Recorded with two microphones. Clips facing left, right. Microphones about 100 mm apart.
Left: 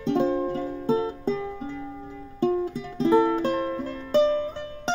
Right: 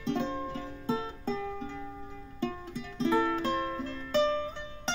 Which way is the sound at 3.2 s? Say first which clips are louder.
Left 7 dB; 20° left (ahead or behind).